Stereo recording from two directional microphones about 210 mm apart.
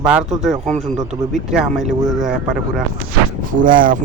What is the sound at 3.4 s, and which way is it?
Speech, 40° right (ahead or behind).